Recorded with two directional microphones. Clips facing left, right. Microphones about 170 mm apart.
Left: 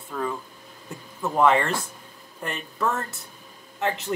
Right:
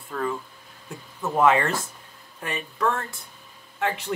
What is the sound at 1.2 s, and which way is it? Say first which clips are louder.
Speech: even; 5° right (ahead or behind).